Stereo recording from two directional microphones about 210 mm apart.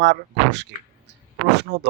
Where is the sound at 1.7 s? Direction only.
55° right (ahead or behind).